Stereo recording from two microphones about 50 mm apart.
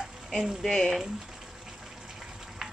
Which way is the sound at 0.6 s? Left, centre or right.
Centre.